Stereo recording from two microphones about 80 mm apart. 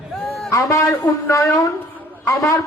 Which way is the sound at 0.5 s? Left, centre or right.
Left.